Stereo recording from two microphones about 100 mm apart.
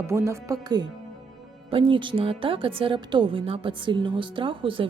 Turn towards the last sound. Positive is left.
turn(degrees=-60)  # may be behind; listen again after turning